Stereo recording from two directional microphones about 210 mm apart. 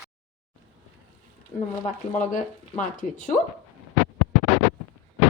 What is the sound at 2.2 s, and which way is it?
Speech, 35° left (ahead or behind).